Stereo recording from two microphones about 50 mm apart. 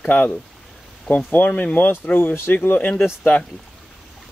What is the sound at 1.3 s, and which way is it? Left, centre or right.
Speech, left.